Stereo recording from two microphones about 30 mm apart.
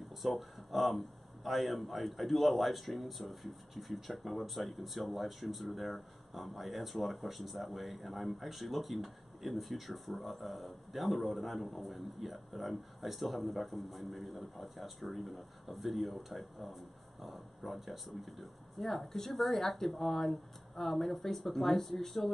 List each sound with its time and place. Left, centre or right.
0.2 s speech: centre